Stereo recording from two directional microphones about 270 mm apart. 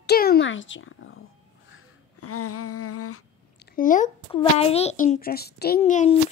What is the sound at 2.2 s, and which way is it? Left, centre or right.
Humming, left.